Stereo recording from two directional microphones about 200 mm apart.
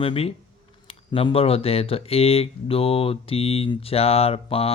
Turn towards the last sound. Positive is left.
turn(degrees=30)  # may be behind; listen again after turning